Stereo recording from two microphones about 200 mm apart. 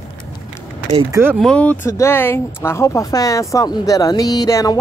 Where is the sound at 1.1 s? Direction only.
10° right (ahead or behind).